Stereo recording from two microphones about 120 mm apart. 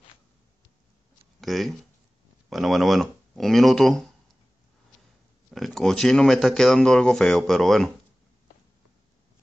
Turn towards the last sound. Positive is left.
turn(degrees=0)  # may be behind; listen again after turning